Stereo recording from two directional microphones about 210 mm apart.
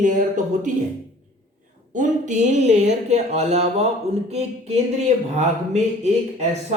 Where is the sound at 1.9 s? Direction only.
35° right (ahead or behind).